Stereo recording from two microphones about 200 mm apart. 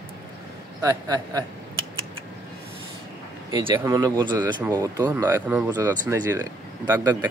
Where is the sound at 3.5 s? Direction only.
20° right (ahead or behind).